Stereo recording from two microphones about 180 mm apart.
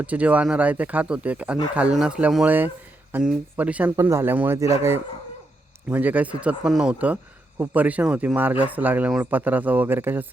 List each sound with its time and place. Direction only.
0.0 s speech: 5° right (ahead or behind)